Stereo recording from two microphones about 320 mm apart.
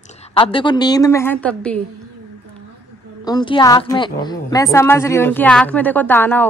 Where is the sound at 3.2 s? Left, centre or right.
Centre.